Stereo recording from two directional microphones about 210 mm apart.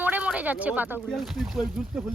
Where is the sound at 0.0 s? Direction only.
5° right (ahead or behind).